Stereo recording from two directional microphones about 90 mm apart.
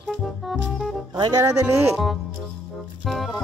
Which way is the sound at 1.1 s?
55° right (ahead or behind).